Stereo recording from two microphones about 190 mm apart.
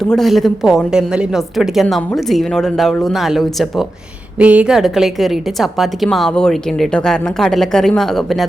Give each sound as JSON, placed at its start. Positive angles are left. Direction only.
{"t": 0.0, "sound": "a woman's voice", "side_deg": 0}